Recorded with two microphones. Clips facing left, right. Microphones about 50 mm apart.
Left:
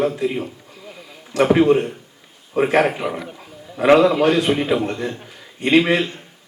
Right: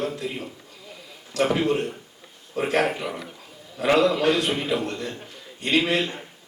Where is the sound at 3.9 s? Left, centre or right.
Centre.